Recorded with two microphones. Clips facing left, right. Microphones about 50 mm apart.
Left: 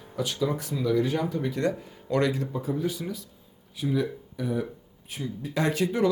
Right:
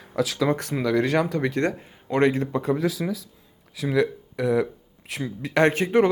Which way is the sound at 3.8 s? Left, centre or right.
Right.